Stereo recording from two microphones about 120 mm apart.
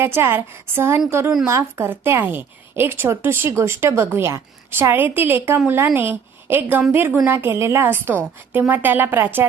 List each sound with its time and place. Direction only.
0.0 s a woman's voice: 20° right (ahead or behind)